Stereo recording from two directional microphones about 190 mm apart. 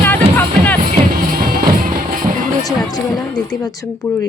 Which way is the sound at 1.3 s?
50° right (ahead or behind).